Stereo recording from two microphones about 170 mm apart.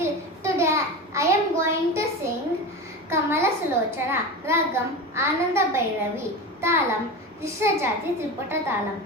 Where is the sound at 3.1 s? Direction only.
15° right (ahead or behind).